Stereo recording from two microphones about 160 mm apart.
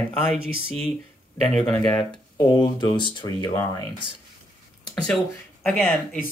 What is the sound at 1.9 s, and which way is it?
Speech, 30° left (ahead or behind).